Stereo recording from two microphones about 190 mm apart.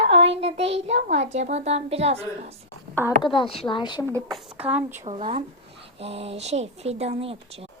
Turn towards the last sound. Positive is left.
turn(degrees=-30)  # may be behind; listen again after turning